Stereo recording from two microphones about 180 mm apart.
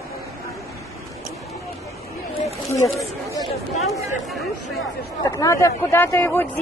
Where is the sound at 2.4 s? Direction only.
15° left (ahead or behind).